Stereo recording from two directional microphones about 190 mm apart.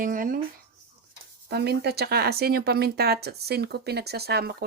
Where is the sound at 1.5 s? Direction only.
55° right (ahead or behind).